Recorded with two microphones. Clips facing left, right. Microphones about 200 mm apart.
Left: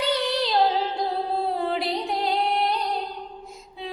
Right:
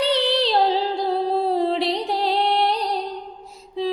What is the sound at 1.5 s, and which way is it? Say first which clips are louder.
Music: right 5 dB; 30° right (ahead or behind).